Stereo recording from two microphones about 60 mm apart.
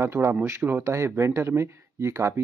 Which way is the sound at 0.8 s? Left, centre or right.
Right.